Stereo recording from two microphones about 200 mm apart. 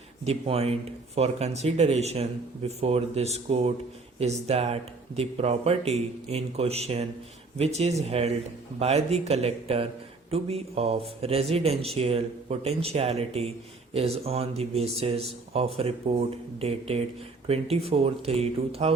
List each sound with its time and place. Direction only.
0.3 s speech: 30° right (ahead or behind)